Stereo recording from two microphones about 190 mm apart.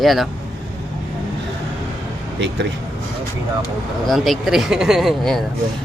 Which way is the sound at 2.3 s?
65° right (ahead or behind).